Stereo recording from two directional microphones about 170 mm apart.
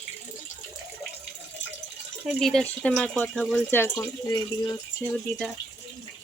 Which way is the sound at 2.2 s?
5° left (ahead or behind).